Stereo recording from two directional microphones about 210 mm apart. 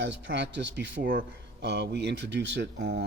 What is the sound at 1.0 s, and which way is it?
Speech, 45° right (ahead or behind).